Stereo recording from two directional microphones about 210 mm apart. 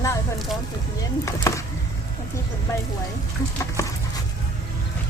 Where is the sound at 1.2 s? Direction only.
15° left (ahead or behind).